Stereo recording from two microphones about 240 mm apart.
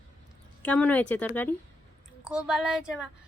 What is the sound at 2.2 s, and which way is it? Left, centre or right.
Speech, centre.